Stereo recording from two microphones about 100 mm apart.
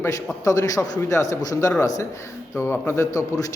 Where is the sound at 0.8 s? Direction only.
30° left (ahead or behind).